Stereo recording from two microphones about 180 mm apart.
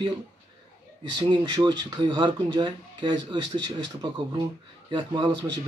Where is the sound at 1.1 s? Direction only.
25° right (ahead or behind).